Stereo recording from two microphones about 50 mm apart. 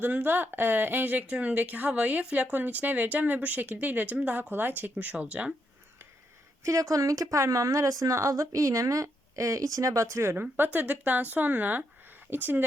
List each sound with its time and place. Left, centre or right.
0.0 s speech: right
6.7 s speech: right
10.3 s speech: right